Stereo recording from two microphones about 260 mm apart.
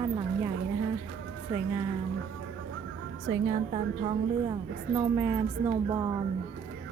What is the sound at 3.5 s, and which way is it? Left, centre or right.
A woman's voice, right.